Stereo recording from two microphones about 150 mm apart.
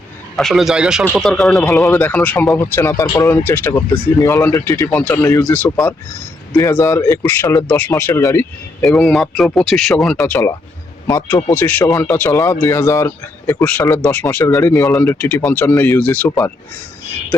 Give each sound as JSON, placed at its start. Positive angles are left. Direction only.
{"t": 0.3, "sound": "speech", "side_deg": 0}
{"t": 1.9, "sound": "speech", "side_deg": 10}
{"t": 8.8, "sound": "speech", "side_deg": 5}